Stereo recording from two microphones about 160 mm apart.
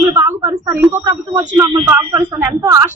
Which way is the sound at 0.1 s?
20° right (ahead or behind).